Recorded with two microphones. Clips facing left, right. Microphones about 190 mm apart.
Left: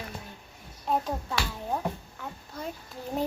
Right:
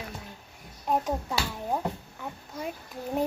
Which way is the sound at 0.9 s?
10° right (ahead or behind).